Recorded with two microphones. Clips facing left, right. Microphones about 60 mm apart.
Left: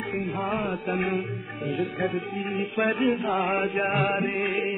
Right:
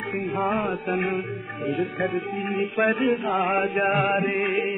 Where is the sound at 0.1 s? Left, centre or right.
Centre.